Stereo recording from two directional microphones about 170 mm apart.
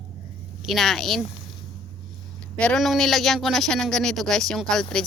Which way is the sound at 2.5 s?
5° left (ahead or behind).